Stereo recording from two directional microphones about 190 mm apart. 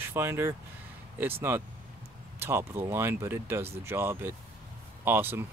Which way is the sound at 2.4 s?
15° right (ahead or behind).